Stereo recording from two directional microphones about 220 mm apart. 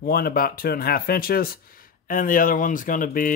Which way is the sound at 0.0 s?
40° left (ahead or behind).